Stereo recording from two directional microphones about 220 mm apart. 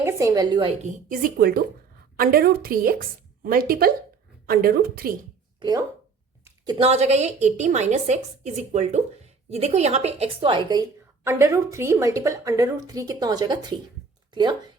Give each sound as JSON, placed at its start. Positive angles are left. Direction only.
{"t": 0.0, "sound": "a woman's voice", "side_deg": -15}
{"t": 0.8, "sound": "a woman's voice", "side_deg": -35}
{"t": 5.5, "sound": "a woman's voice", "side_deg": -20}